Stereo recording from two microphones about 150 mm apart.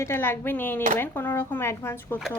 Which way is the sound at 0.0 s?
15° left (ahead or behind).